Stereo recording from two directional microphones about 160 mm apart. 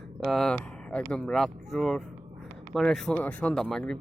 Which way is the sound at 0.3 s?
Centre (ahead or behind).